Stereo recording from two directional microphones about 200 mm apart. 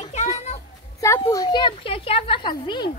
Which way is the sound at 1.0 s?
15° left (ahead or behind).